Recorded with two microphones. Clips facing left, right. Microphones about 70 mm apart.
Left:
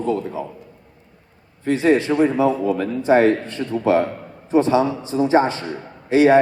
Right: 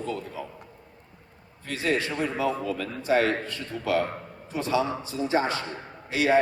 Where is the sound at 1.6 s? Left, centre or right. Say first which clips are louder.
Left 11 dB; left.